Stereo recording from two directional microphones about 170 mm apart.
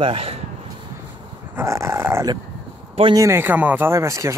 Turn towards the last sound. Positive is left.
turn(degrees=-15)  # may be behind; listen again after turning